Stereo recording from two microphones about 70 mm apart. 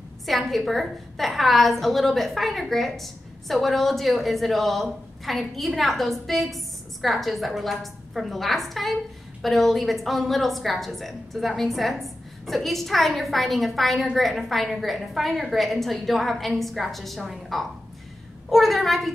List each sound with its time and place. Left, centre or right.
0.3 s a woman's voice: centre